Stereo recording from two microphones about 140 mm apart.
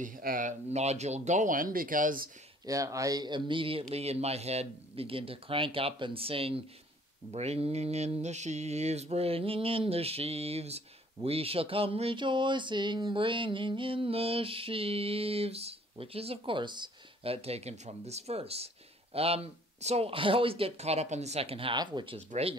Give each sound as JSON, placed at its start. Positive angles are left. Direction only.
{"t": 0.0, "sound": "speech", "side_deg": -80}
{"t": 2.6, "sound": "speech", "side_deg": -25}
{"t": 7.2, "sound": "mantra", "side_deg": -50}
{"t": 11.2, "sound": "speech", "side_deg": -45}
{"t": 19.1, "sound": "mantra", "side_deg": -45}